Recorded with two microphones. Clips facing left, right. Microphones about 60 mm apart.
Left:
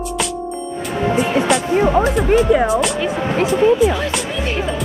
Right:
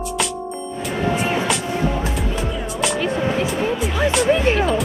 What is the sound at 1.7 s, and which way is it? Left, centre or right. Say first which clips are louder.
Music: left 8 dB; left.